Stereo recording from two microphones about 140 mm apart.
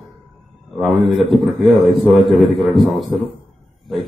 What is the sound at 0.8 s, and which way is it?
A man's voice, centre (ahead or behind).